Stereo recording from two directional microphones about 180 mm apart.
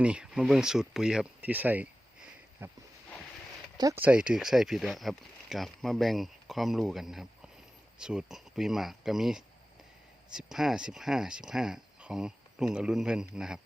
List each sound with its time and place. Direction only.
0.0 s speech: 5° right (ahead or behind)
2.6 s a sound: 10° right (ahead or behind)
3.8 s speech: 20° right (ahead or behind)
4.0 s speech: 5° right (ahead or behind)